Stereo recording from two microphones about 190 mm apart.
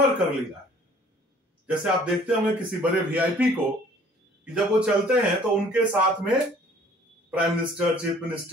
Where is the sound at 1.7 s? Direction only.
5° right (ahead or behind).